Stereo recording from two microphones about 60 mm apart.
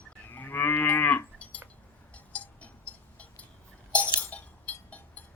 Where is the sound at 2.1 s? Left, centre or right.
Left.